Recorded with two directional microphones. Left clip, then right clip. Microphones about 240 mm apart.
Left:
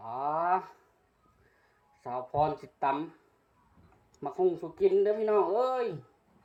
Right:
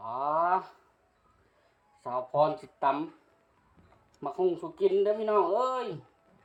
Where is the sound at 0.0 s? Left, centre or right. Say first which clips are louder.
Right 2 dB; centre.